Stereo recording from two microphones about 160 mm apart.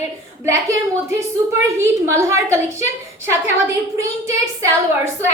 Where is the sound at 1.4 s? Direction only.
20° right (ahead or behind).